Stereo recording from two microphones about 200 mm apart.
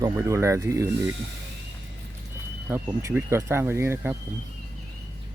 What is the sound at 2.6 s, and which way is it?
Speech, 10° right (ahead or behind).